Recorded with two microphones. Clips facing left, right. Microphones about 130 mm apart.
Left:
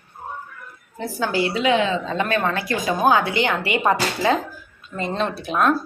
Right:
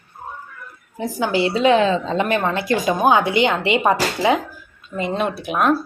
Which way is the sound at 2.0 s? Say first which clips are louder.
Right 2 dB; 20° right (ahead or behind).